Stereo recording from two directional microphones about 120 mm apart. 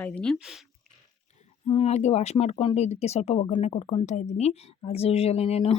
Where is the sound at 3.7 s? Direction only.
50° left (ahead or behind).